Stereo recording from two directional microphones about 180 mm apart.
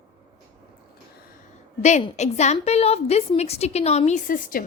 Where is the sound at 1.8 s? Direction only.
40° left (ahead or behind).